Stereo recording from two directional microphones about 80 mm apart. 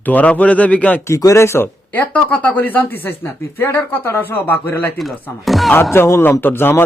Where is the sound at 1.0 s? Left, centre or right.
Left.